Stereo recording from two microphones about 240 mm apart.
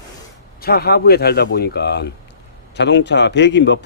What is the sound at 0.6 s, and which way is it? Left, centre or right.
A man's voice, left.